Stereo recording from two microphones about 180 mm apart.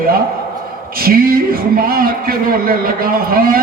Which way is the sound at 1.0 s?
55° right (ahead or behind).